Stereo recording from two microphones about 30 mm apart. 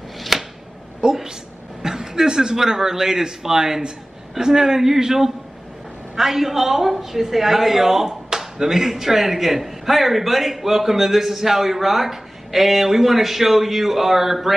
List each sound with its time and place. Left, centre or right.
0.3 s a sound: centre
1.0 s a woman's voice: right
1.8 s a man's voice: centre